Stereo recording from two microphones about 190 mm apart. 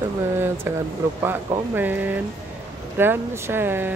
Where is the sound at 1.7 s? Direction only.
10° right (ahead or behind).